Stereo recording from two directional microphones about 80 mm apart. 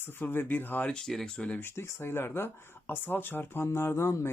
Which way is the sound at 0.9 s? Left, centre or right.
Centre.